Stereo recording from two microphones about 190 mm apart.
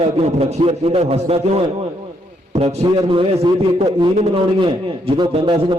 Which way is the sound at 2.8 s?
25° right (ahead or behind).